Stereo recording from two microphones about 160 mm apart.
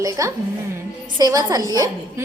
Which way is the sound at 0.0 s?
20° right (ahead or behind).